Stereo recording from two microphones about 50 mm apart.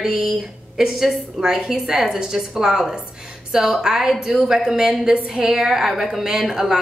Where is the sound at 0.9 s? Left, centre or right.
Centre.